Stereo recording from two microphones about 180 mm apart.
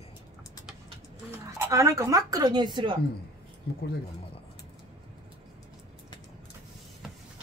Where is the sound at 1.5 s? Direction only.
15° right (ahead or behind).